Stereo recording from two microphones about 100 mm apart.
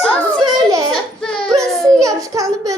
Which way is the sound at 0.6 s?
40° right (ahead or behind).